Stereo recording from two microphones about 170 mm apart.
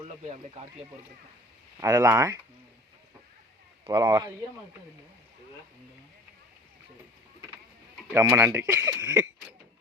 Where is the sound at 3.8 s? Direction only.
20° right (ahead or behind).